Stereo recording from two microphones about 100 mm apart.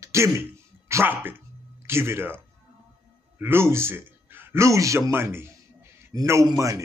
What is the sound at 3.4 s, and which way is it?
A man's voice, 25° right (ahead or behind).